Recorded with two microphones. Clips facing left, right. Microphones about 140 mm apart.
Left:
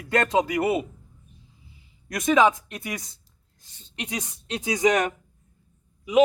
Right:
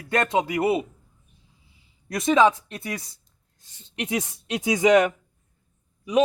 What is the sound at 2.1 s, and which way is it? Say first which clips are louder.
Speech: right 1 dB; 30° right (ahead or behind).